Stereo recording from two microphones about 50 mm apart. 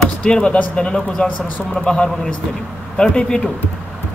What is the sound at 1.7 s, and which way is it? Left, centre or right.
Speech, centre.